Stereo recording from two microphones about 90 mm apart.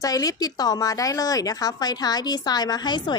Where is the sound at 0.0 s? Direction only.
40° left (ahead or behind).